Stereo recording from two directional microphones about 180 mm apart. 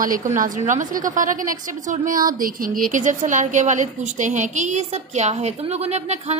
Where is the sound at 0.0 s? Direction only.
45° right (ahead or behind).